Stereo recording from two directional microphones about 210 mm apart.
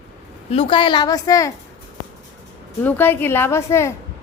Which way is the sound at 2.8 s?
10° left (ahead or behind).